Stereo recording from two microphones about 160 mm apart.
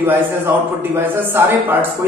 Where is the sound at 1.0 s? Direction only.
15° right (ahead or behind).